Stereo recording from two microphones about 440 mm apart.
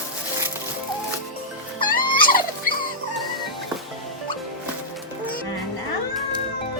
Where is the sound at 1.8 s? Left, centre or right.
Centre.